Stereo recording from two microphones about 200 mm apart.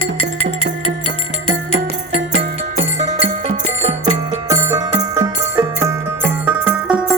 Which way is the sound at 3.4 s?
35° right (ahead or behind).